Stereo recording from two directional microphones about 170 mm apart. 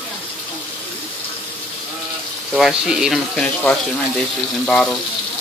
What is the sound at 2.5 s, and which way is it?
Speech, centre (ahead or behind).